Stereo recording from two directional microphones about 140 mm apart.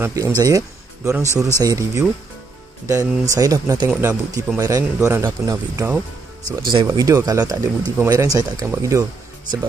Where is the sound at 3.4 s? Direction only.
25° right (ahead or behind).